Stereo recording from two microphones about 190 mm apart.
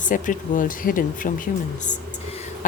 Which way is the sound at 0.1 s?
45° left (ahead or behind).